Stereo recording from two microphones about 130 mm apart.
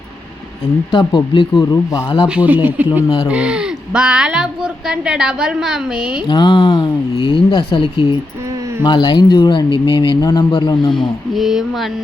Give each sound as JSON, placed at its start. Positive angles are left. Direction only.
{"t": 0.9, "sound": "speech", "side_deg": 35}
{"t": 2.2, "sound": "a woman's voice", "side_deg": -10}
{"t": 6.2, "sound": "speech", "side_deg": 35}
{"t": 11.3, "sound": "a woman's voice", "side_deg": 0}